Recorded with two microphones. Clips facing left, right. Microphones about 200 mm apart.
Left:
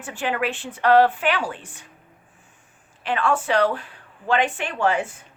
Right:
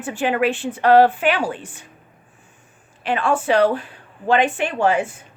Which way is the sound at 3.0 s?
15° right (ahead or behind).